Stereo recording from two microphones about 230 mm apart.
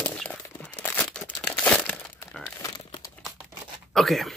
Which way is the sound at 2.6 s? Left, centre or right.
Centre.